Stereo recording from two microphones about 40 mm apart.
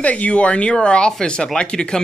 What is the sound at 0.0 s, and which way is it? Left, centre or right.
Speech, left.